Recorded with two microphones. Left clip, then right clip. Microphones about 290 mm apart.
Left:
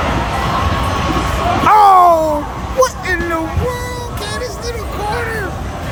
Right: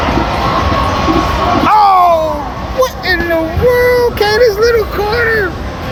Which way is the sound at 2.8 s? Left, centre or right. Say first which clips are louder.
Right 3 dB; centre.